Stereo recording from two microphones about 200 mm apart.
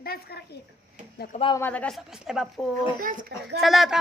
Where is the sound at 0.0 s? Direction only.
50° left (ahead or behind).